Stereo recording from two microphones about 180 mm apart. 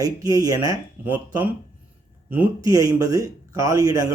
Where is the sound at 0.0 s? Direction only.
20° right (ahead or behind).